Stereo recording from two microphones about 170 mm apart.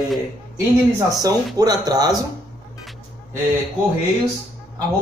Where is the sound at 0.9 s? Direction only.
20° right (ahead or behind).